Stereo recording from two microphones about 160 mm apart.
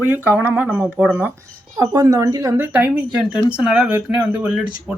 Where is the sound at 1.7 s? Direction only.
25° right (ahead or behind).